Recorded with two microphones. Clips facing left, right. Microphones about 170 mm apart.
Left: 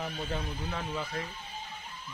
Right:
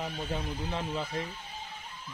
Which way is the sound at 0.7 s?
20° right (ahead or behind).